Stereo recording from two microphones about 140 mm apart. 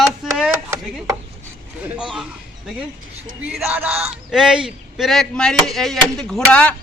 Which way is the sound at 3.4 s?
5° right (ahead or behind).